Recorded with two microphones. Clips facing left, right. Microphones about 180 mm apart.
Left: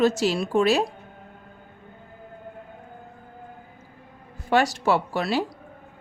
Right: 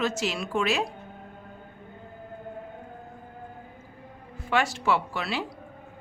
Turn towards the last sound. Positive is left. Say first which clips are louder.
# left 4 dB
turn(degrees=40)  # may be behind; listen again after turning